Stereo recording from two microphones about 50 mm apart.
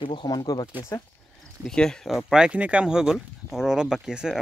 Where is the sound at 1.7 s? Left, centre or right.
Centre.